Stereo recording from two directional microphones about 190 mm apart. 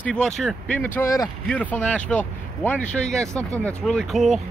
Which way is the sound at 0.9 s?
15° left (ahead or behind).